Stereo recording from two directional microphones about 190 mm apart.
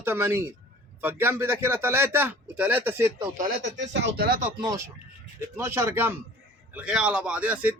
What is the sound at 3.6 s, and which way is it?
Speech, 70° right (ahead or behind).